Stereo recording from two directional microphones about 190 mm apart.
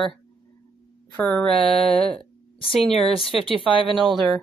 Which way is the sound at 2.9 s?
30° left (ahead or behind).